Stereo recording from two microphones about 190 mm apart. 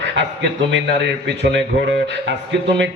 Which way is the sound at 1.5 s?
70° right (ahead or behind).